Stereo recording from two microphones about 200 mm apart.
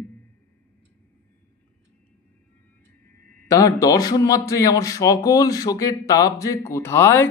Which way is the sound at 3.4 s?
15° left (ahead or behind).